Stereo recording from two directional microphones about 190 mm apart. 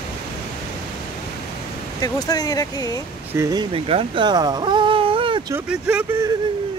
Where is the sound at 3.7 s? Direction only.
30° right (ahead or behind).